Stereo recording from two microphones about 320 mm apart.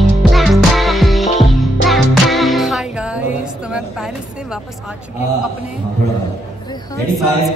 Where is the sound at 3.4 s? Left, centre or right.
Centre.